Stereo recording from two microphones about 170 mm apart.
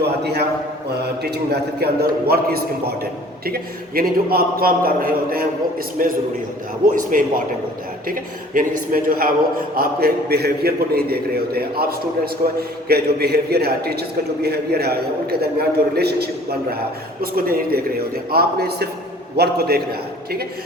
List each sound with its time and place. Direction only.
0.0 s a man's voice: 80° right